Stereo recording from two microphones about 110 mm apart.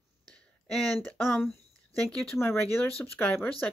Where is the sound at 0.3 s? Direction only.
5° left (ahead or behind).